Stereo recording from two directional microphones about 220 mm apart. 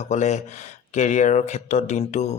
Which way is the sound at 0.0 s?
30° left (ahead or behind).